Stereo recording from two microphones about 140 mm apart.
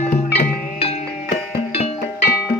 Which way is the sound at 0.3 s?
45° left (ahead or behind).